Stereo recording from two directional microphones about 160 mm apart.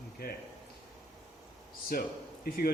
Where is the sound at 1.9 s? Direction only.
65° left (ahead or behind).